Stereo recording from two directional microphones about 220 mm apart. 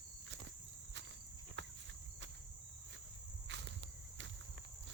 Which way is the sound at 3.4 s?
55° right (ahead or behind).